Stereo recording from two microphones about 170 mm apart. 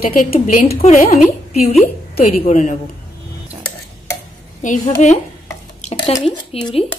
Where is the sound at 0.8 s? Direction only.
40° left (ahead or behind).